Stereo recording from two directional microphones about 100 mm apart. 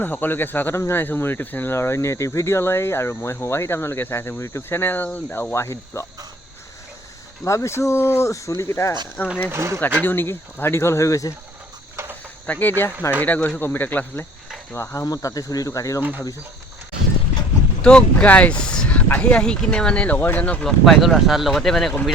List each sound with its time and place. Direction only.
0.0 s speech: 20° left (ahead or behind)
7.4 s speech: 30° left (ahead or behind)
9.5 s speech: 25° right (ahead or behind)
10.0 s speech: 20° left (ahead or behind)
12.5 s speech: 20° left (ahead or behind)
14.7 s speech: 30° left (ahead or behind)
17.8 s speech: 10° left (ahead or behind)